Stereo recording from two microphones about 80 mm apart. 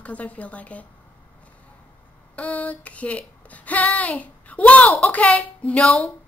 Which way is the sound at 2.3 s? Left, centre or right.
Centre.